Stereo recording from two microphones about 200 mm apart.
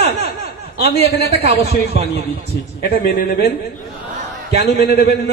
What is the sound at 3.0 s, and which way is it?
Speech, 50° left (ahead or behind).